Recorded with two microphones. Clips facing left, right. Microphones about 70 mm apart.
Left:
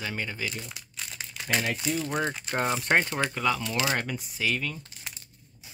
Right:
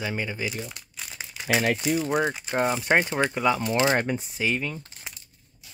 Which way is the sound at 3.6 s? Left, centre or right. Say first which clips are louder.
Right 6 dB; right.